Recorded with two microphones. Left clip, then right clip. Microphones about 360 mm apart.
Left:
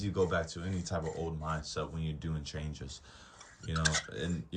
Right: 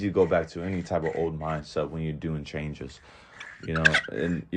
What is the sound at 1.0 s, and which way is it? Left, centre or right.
Speech, right.